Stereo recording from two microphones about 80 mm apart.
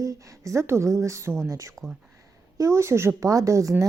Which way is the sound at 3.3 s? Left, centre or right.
Right.